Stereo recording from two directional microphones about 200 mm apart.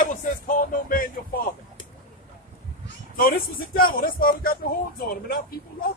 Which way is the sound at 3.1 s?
45° left (ahead or behind).